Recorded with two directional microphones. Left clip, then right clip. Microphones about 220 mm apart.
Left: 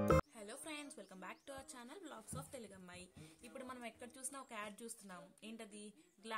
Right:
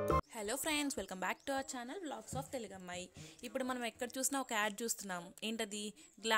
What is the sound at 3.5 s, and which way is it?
Speech, 45° right (ahead or behind).